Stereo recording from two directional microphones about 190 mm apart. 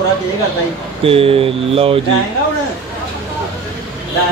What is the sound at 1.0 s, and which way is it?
Speech, 30° right (ahead or behind).